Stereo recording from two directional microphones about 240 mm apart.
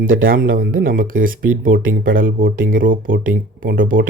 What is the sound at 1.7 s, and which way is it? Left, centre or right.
Speech, right.